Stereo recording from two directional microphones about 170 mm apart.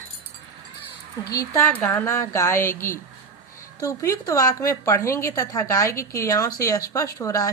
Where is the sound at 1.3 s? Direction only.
20° left (ahead or behind).